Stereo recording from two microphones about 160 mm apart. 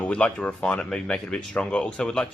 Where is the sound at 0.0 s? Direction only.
5° left (ahead or behind).